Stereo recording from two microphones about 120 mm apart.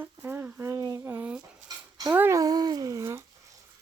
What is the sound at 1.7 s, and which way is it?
Dog, 30° right (ahead or behind).